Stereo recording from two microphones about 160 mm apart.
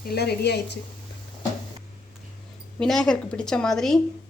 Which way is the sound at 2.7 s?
5° left (ahead or behind).